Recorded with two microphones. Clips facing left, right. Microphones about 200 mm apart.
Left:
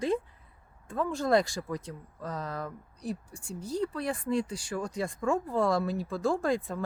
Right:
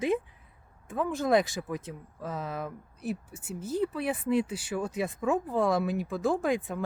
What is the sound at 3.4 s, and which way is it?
Speech, 25° right (ahead or behind).